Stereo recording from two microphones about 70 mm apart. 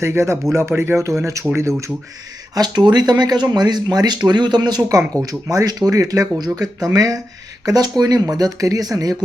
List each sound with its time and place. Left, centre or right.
0.0 s speech: right
2.6 s speech: right